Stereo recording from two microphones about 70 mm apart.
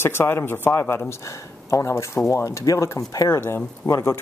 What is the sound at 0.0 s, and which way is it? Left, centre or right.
Speech, left.